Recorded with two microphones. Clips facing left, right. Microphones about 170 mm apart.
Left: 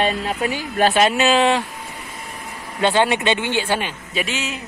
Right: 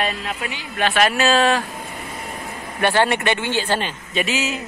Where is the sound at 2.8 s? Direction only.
15° left (ahead or behind).